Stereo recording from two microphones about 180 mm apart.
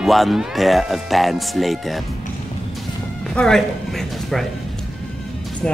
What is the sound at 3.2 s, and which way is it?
Speech, 5° left (ahead or behind).